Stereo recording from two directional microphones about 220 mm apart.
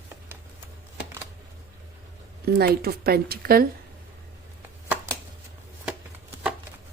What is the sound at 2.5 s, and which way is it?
Speech, 45° right (ahead or behind).